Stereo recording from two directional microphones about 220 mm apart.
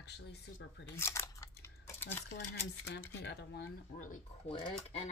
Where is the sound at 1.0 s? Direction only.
10° left (ahead or behind).